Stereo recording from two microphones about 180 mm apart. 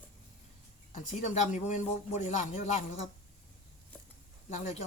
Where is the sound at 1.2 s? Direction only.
40° left (ahead or behind).